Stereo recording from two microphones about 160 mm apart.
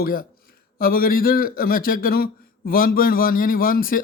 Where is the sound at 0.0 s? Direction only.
65° left (ahead or behind).